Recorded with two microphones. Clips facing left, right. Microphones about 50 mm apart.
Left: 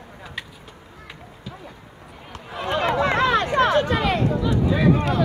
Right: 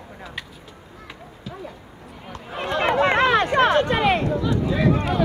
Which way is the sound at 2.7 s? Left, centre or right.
Right.